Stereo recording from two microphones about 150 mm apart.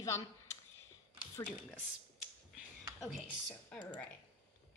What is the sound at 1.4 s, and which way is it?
Speech, 10° left (ahead or behind).